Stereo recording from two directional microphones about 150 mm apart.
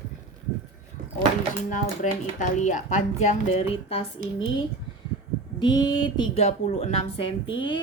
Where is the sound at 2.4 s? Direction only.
55° left (ahead or behind).